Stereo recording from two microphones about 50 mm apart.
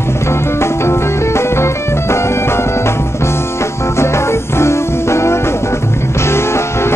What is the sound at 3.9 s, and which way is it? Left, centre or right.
Music, left.